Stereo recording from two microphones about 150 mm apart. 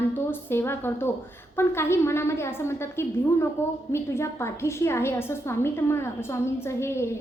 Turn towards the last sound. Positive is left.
turn(degrees=15)  # may be behind; listen again after turning